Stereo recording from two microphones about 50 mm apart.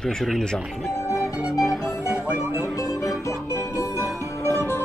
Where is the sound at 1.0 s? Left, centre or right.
Left.